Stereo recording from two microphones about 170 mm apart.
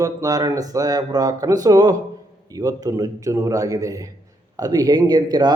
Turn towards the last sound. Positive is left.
turn(degrees=-25)  # may be behind; listen again after turning